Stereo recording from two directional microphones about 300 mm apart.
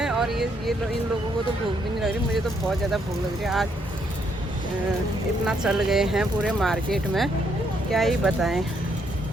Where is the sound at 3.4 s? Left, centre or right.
Centre.